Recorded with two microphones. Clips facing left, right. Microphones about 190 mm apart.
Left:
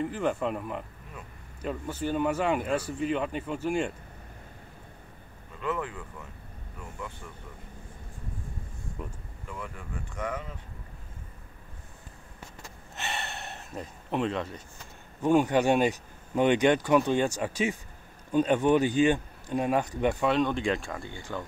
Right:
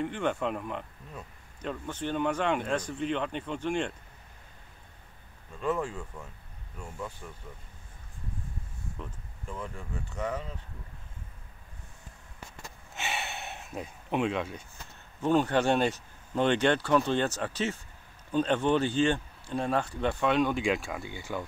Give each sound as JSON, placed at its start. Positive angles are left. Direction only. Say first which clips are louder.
{"t": 0.0, "sound": "speech", "louder": "left 1 dB", "side_deg": 0}
{"t": 5.6, "sound": "speech", "louder": "right 2 dB", "side_deg": -25}
{"t": 9.0, "sound": "speech", "louder": "left 3 dB", "side_deg": 10}
{"t": 9.5, "sound": "speech", "louder": "right 1 dB", "side_deg": -25}
{"t": 12.9, "sound": "a sound", "louder": "even", "side_deg": 0}
{"t": 15.2, "sound": "speech", "louder": "left 2 dB", "side_deg": 15}
{"t": 20.2, "sound": "speech", "louder": "right 2 dB", "side_deg": -5}